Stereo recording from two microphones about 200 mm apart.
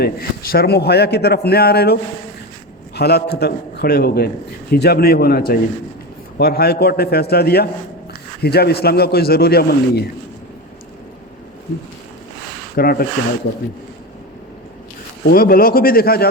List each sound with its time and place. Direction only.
0.0 s a man's voice: 50° left (ahead or behind)
12.7 s a man's voice: 50° left (ahead or behind)
15.3 s a man's voice: 45° left (ahead or behind)